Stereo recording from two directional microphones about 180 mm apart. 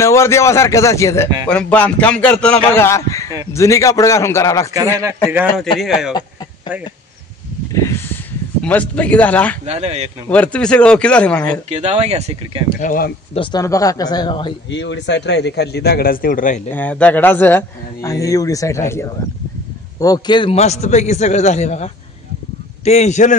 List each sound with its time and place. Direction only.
0.0 s speech: 15° left (ahead or behind)
5.8 s a man's voice: centre (ahead or behind)
7.8 s a sound: 15° left (ahead or behind)
8.6 s speech: 10° left (ahead or behind)
9.7 s speech: 35° right (ahead or behind)
10.3 s speech: 10° left (ahead or behind)
11.7 s speech: 35° right (ahead or behind)
12.8 s speech: 50° left (ahead or behind)
13.3 s speech: 25° left (ahead or behind)
14.7 s a man's voice: 90° left; by 16.6 s 50° left (ahead or behind)
16.7 s a man's voice: 10° left (ahead or behind); by 23.3 s 40° left (ahead or behind)